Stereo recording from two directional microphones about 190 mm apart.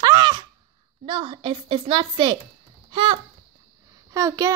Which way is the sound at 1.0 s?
30° right (ahead or behind).